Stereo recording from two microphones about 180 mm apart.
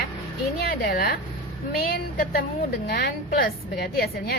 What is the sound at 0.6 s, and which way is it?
A woman's voice, 55° left (ahead or behind).